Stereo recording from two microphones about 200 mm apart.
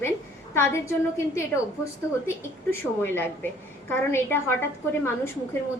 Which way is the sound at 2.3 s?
10° left (ahead or behind).